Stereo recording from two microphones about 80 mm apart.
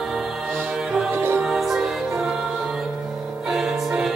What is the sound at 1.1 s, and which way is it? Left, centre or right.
Music, right.